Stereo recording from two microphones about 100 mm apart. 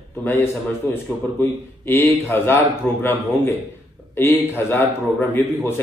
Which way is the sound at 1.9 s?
20° left (ahead or behind).